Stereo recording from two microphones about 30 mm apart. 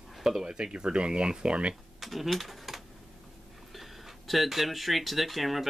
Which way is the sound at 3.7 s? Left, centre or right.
Centre.